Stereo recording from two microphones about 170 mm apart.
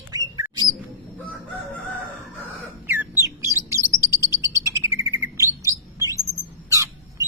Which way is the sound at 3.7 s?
15° right (ahead or behind).